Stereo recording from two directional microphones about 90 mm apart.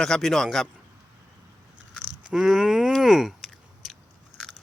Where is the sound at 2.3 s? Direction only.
5° right (ahead or behind).